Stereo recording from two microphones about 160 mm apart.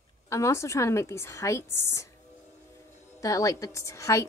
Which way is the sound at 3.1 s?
20° left (ahead or behind).